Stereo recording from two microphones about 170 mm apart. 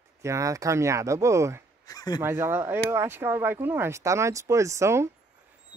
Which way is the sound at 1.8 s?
20° left (ahead or behind).